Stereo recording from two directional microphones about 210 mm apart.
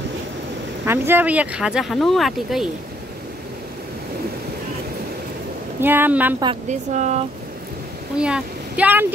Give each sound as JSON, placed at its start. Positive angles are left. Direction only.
{"t": 0.8, "sound": "speech", "side_deg": -10}
{"t": 5.8, "sound": "speech", "side_deg": -10}
{"t": 6.4, "sound": "speech", "side_deg": -30}
{"t": 8.2, "sound": "speech", "side_deg": -5}